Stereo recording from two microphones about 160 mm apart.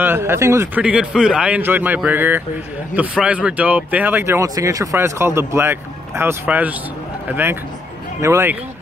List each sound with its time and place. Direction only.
0.0 s speech: 15° right (ahead or behind)